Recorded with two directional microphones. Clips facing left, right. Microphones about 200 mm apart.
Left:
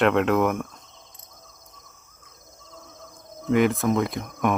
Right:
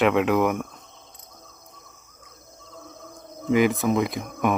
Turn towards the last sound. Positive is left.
turn(degrees=-5)  # may be behind; listen again after turning